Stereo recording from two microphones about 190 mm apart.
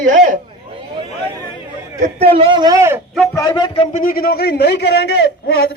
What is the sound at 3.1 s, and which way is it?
Speech, 15° left (ahead or behind).